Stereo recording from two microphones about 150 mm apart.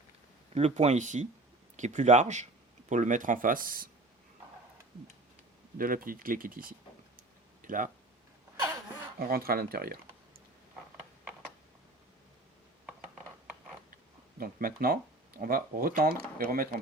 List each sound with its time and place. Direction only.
0.5 s speech: 45° right (ahead or behind); by 3.8 s 70° right (ahead or behind)
5.7 s speech: 70° right (ahead or behind)
7.2 s a sound: 65° right (ahead or behind)
9.1 s speech: 85° right
13.9 s speech: 70° right (ahead or behind)